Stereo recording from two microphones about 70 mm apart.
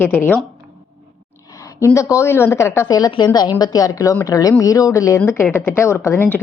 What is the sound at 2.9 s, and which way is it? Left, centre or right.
A woman's voice, left.